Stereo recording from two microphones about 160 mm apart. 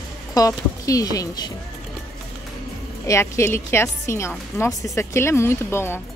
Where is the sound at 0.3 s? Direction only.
20° left (ahead or behind).